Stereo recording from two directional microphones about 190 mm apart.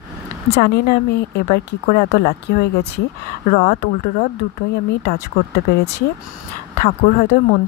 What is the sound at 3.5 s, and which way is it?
Speech, 40° left (ahead or behind).